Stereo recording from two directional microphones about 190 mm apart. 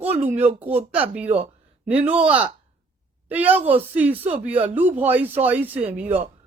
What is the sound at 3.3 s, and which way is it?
A woman's voice, 10° right (ahead or behind).